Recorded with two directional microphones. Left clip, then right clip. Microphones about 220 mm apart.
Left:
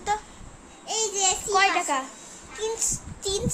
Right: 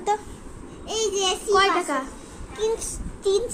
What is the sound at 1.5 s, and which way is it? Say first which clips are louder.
Speech: right 2 dB; 20° left (ahead or behind).